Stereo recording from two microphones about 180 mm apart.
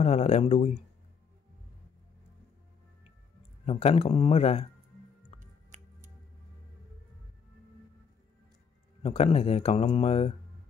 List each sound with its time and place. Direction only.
0.0 s speech: 35° left (ahead or behind)
3.6 s speech: 35° left (ahead or behind)
5.4 s music: 45° right (ahead or behind)
9.0 s speech: 35° left (ahead or behind)